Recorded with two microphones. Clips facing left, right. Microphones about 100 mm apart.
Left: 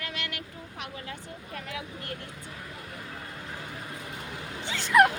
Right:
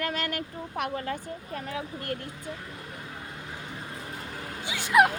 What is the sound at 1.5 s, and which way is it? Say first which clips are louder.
Speech: right 3 dB; 35° right (ahead or behind).